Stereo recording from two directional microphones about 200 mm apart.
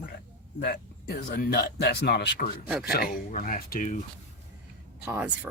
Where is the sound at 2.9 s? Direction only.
45° left (ahead or behind).